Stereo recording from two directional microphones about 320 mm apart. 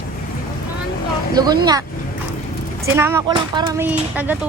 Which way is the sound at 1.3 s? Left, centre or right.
Centre.